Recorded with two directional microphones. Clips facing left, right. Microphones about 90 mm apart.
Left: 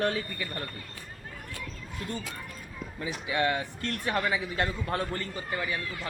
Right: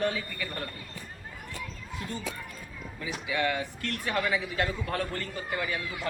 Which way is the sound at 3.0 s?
30° left (ahead or behind).